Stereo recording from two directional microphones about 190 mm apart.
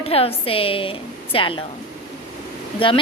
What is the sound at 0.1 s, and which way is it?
A woman's voice, 30° left (ahead or behind).